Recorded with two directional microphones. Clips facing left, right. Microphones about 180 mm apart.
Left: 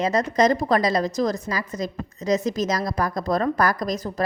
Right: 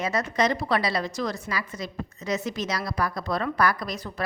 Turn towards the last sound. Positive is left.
turn(degrees=40)  # may be behind; listen again after turning